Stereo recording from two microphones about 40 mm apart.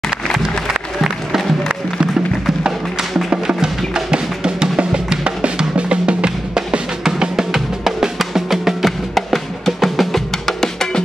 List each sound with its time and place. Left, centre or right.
3.6 s music: centre
4.7 s drum: right; by 8.9 s centre
9.1 s percussion: centre